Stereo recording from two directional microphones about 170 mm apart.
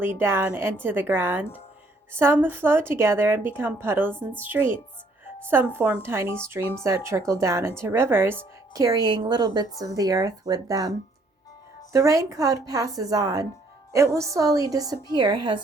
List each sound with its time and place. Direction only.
0.0 s a woman's voice: 15° right (ahead or behind)